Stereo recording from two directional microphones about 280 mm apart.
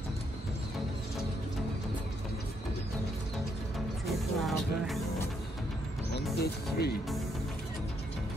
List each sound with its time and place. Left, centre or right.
4.0 s music: centre
6.1 s music: left